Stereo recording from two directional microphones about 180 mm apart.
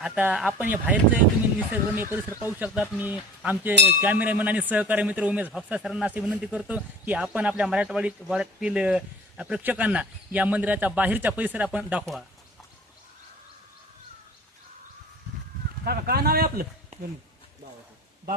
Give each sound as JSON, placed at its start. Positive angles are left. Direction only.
{"t": 0.0, "sound": "a man's voice", "side_deg": -5}
{"t": 15.8, "sound": "speech", "side_deg": -60}